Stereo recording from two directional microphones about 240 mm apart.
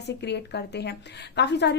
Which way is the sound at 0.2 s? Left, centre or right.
Left.